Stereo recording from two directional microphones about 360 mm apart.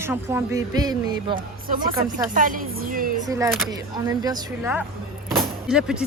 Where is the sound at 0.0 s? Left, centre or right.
Centre.